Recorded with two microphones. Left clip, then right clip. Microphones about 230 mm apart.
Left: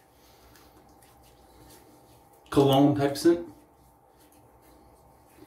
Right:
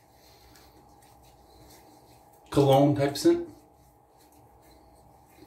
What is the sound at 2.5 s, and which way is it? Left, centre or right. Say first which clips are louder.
Speech: even; centre.